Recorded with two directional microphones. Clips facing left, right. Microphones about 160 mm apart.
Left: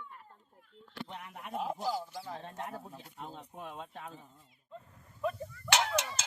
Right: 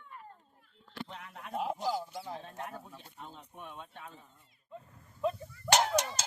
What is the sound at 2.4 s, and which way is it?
Speech, 30° left (ahead or behind).